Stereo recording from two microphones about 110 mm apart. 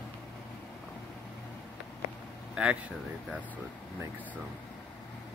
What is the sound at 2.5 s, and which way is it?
Speech, 10° right (ahead or behind).